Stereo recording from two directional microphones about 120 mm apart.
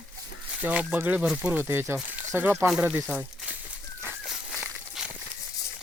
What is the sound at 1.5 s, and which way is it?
Speech, 20° right (ahead or behind).